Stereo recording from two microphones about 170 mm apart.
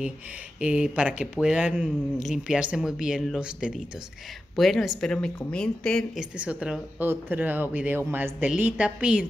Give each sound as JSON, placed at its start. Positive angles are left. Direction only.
{"t": 0.6, "sound": "speech", "side_deg": -5}
{"t": 6.3, "sound": "speech", "side_deg": -10}